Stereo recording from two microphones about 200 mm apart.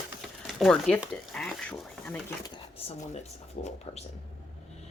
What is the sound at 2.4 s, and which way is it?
Speech, 25° left (ahead or behind).